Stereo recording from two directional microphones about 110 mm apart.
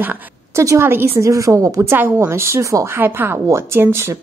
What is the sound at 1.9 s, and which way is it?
A woman's voice, 20° right (ahead or behind).